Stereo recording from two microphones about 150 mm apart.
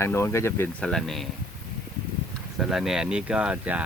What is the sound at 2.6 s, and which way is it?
Speech, centre (ahead or behind).